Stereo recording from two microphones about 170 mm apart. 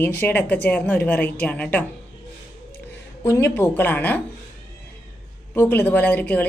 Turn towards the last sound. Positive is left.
turn(degrees=10)  # may be behind; listen again after turning